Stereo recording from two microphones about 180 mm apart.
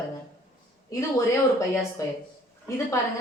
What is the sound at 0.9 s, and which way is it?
A woman's voice, 20° left (ahead or behind).